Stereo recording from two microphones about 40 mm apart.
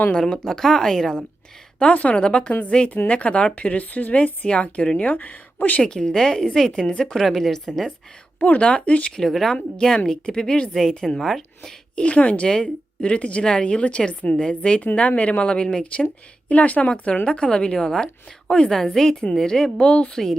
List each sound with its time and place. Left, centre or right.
0.2 s a woman's voice: centre
1.8 s speech: left
2.1 s a woman's voice: left
4.9 s speech: left
5.8 s a woman's voice: centre
8.4 s a woman's voice: left
9.1 s a woman's voice: centre
9.6 s a woman's voice: centre
11.9 s a woman's voice: left
12.5 s a woman's voice: left
14.9 s a woman's voice: left
16.5 s speech: left
17.2 s a woman's voice: left
20.2 s speech: centre